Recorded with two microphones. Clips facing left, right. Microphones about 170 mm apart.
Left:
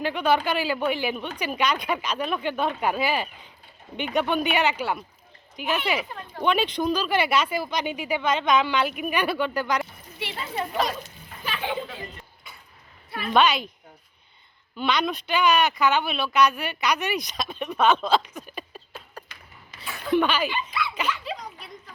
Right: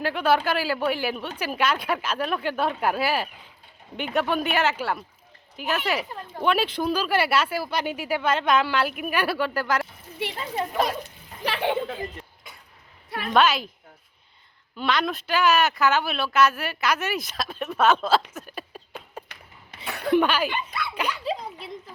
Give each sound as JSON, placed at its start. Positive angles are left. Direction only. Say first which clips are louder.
{"t": 0.0, "sound": "speech", "louder": "right 1 dB", "side_deg": -5}
{"t": 10.2, "sound": "speech", "louder": "right 2 dB", "side_deg": -50}
{"t": 11.4, "sound": "a child's voice", "louder": "right 5 dB", "side_deg": -70}
{"t": 13.3, "sound": "speech", "louder": "even", "side_deg": 0}
{"t": 14.8, "sound": "speech", "louder": "even", "side_deg": 0}
{"t": 18.3, "sound": "a sound", "louder": "even", "side_deg": -5}
{"t": 19.3, "sound": "a sound", "louder": "right 1 dB", "side_deg": -65}
{"t": 20.1, "sound": "speech", "louder": "right 1 dB", "side_deg": -10}
{"t": 21.1, "sound": "a child's voice", "louder": "right 2 dB", "side_deg": -30}